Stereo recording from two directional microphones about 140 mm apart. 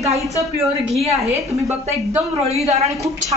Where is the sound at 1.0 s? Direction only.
45° right (ahead or behind).